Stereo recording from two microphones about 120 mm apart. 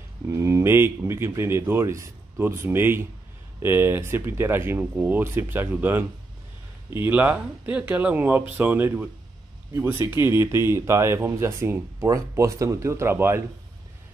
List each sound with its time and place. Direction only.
0.3 s speech: 25° right (ahead or behind)